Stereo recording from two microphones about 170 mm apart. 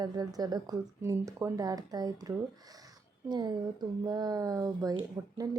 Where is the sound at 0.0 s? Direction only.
20° right (ahead or behind).